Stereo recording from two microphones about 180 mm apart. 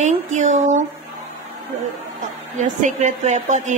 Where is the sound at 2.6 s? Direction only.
45° right (ahead or behind).